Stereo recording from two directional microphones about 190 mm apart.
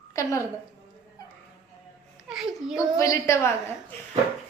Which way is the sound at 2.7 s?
15° left (ahead or behind).